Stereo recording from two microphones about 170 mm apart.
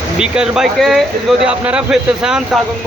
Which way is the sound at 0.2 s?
5° right (ahead or behind).